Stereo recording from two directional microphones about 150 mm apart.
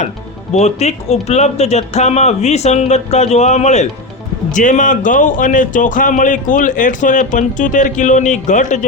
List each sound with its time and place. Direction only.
0.5 s speech: 45° left (ahead or behind)